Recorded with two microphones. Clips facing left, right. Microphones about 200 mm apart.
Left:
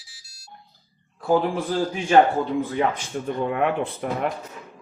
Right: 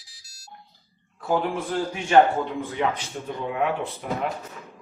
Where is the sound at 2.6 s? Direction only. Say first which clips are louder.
Left 3 dB; 45° left (ahead or behind).